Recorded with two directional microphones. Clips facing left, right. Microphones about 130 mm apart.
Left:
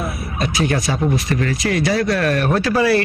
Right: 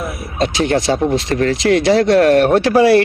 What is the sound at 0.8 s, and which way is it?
Speech, 80° right.